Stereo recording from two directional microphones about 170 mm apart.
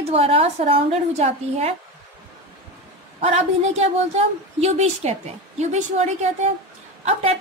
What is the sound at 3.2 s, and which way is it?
A woman's voice, 40° right (ahead or behind).